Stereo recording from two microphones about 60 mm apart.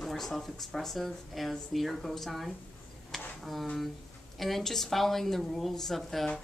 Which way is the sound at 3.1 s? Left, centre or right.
Centre.